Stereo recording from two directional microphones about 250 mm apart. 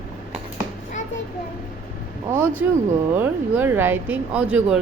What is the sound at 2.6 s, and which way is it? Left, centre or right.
A woman's voice, centre.